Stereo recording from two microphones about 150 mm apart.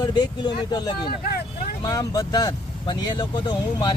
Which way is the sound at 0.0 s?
30° left (ahead or behind).